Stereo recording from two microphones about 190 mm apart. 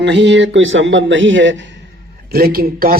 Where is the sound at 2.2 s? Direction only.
50° right (ahead or behind).